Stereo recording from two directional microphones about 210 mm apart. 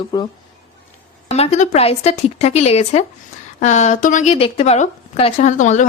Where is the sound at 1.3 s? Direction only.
30° left (ahead or behind).